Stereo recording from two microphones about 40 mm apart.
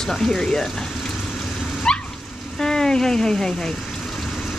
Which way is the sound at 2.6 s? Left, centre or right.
Centre.